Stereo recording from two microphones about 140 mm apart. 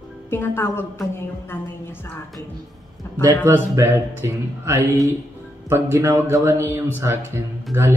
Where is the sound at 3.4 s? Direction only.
20° right (ahead or behind).